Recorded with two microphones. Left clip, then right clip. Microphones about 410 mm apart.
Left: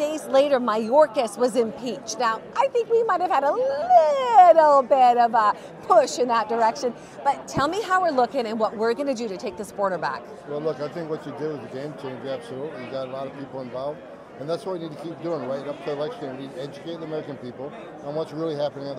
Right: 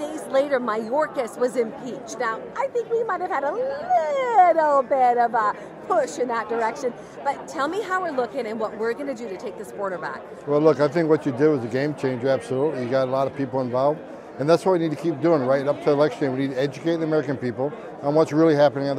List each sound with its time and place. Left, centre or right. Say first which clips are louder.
0.0 s speech: left 3 dB; left
10.5 s speech: right 10 dB; right